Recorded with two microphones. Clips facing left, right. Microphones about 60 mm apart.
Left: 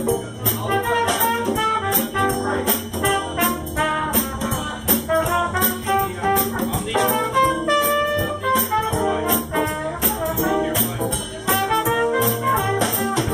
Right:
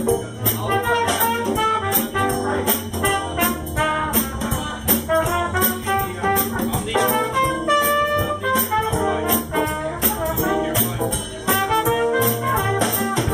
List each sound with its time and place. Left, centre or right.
0.7 s music: centre